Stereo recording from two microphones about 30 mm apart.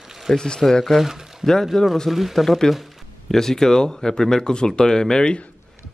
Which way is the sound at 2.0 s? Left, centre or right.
Centre.